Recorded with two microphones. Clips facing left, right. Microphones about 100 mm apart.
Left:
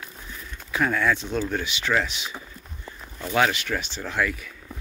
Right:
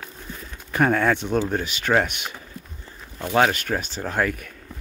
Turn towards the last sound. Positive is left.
turn(degrees=-50)  # may be behind; listen again after turning